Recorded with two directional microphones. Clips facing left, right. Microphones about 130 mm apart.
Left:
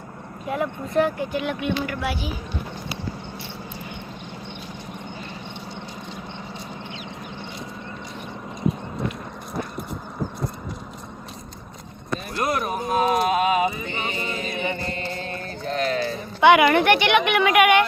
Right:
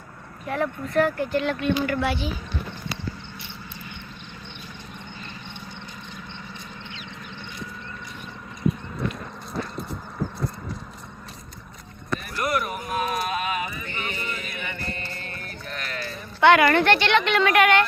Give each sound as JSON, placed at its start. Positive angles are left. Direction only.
{"t": 0.4, "sound": "speech", "side_deg": 10}
{"t": 12.3, "sound": "a sound", "side_deg": 20}
{"t": 14.6, "sound": "mantra", "side_deg": 20}
{"t": 16.0, "sound": "speech", "side_deg": 15}